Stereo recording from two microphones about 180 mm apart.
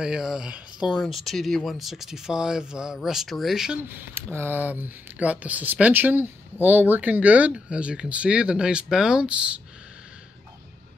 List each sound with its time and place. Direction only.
0.0 s speech: 5° right (ahead or behind)